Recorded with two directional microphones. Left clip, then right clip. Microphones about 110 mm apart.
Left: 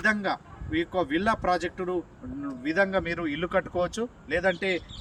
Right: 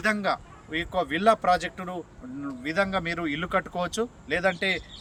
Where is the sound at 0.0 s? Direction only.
35° right (ahead or behind).